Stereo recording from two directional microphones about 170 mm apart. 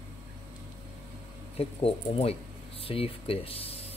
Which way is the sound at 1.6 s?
35° left (ahead or behind).